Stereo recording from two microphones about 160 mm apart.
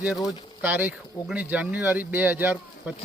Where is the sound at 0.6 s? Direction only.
10° right (ahead or behind).